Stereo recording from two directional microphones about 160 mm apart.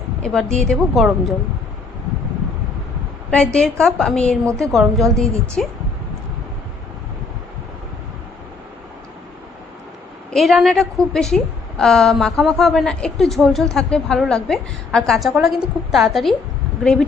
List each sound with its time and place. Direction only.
0.2 s a woman's voice: 5° left (ahead or behind)
3.2 s a woman's voice: 5° left (ahead or behind)
10.3 s a woman's voice: centre (ahead or behind)